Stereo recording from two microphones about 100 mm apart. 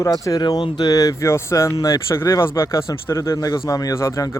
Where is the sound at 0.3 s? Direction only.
45° left (ahead or behind).